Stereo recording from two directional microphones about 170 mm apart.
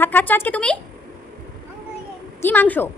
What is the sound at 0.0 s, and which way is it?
Speech, 10° left (ahead or behind).